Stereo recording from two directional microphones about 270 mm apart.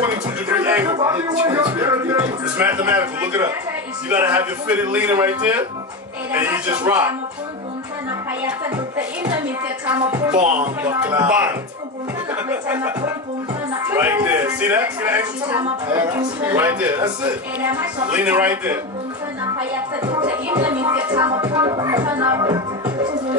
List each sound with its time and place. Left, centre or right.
0.5 s music: centre
4.1 s a man's voice: centre
8.5 s a man's voice: centre
10.3 s speech: right
10.9 s a man's voice: centre
20.2 s a man's voice: centre